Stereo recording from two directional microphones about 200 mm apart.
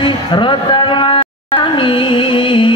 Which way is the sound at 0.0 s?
25° left (ahead or behind).